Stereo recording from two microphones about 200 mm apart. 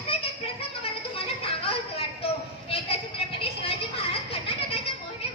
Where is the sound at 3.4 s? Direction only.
30° left (ahead or behind).